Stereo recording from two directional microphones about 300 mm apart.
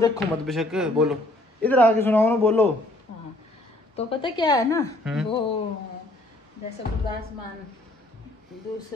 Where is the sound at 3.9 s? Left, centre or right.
Centre.